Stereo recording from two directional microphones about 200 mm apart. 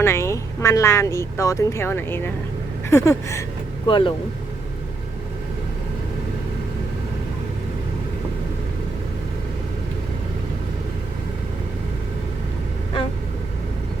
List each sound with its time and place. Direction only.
0.0 s speech: 15° left (ahead or behind)
3.8 s speech: 25° left (ahead or behind)